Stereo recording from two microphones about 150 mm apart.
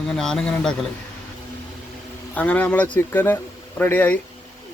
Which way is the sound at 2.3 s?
10° left (ahead or behind).